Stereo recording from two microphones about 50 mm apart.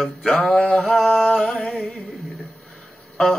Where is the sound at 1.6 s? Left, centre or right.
Centre.